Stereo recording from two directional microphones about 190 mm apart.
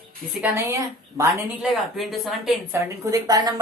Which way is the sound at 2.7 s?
15° right (ahead or behind).